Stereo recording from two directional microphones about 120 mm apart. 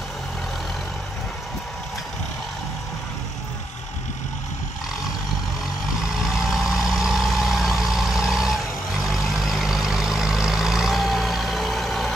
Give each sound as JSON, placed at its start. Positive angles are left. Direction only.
{"t": 6.1, "sound": "vehicle", "side_deg": -5}